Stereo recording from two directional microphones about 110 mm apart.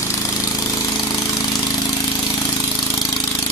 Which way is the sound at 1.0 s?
30° left (ahead or behind).